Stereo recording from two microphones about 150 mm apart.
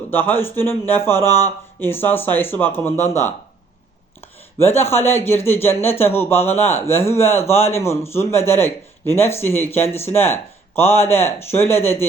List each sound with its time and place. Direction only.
0.1 s a man's voice: 15° left (ahead or behind)
4.6 s a man's voice: 15° left (ahead or behind)